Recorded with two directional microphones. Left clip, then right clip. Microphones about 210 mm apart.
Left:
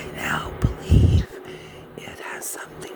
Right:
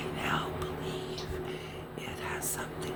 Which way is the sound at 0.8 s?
60° left (ahead or behind).